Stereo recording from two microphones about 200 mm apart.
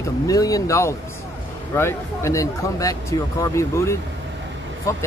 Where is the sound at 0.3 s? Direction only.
15° left (ahead or behind).